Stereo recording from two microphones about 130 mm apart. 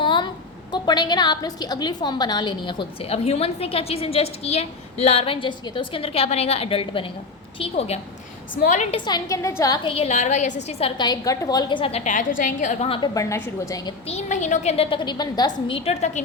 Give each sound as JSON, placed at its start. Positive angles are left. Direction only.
{"t": 0.0, "sound": "a sound", "side_deg": 35}
{"t": 0.7, "sound": "a woman's voice", "side_deg": 30}
{"t": 8.5, "sound": "a woman's voice", "side_deg": 75}
{"t": 9.0, "sound": "a woman's voice", "side_deg": 30}
{"t": 9.9, "sound": "a woman's voice", "side_deg": 55}
{"t": 12.0, "sound": "a woman's voice", "side_deg": 85}
{"t": 13.1, "sound": "a woman's voice", "side_deg": 20}
{"t": 14.1, "sound": "a woman's voice", "side_deg": 60}
{"t": 14.8, "sound": "a woman's voice", "side_deg": 35}
{"t": 15.6, "sound": "a woman's voice", "side_deg": 45}